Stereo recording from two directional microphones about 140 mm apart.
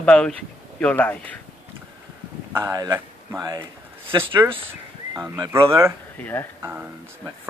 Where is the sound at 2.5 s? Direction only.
25° right (ahead or behind).